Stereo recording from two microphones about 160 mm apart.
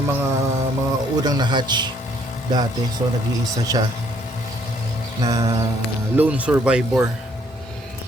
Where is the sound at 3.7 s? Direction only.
20° right (ahead or behind).